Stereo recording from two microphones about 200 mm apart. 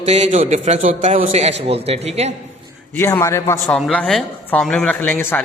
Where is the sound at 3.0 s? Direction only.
15° left (ahead or behind).